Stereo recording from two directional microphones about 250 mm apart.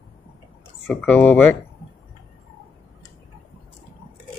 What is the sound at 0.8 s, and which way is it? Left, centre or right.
Speech, centre.